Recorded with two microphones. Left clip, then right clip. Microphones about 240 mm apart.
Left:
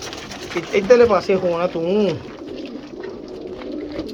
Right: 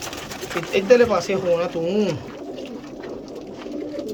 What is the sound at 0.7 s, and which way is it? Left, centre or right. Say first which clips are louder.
Speech: left 3 dB; centre.